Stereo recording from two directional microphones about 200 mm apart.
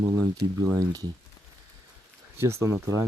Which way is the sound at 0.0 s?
15° right (ahead or behind).